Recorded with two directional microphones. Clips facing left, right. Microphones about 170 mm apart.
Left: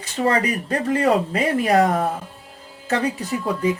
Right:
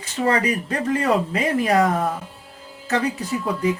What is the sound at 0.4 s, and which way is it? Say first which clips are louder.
Speech: even; 35° left (ahead or behind).